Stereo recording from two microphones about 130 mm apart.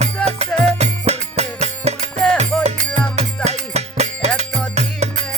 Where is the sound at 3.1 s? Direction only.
55° right (ahead or behind).